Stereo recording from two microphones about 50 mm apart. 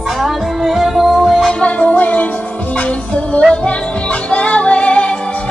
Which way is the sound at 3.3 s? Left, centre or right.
Left.